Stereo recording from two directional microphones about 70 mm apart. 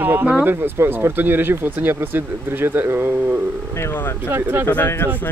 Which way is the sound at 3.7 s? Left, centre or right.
Left.